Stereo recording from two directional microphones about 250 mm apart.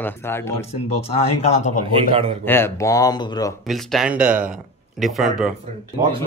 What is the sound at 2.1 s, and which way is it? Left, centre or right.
Speech, right.